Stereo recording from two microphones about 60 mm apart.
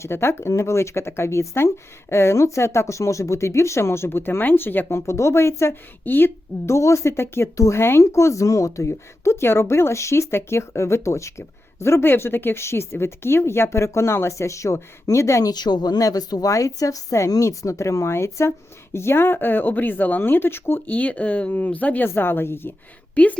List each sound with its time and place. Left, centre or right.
0.0 s a woman's voice: left
4.9 s a woman's voice: left
6.1 s speech: left
6.7 s a woman's voice: left
7.5 s a woman's voice: left
16.0 s speech: left
22.0 s speech: left
23.1 s a woman's voice: left